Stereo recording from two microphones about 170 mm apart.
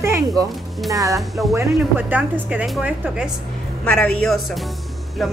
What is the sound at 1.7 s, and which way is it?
A woman's voice, 10° right (ahead or behind).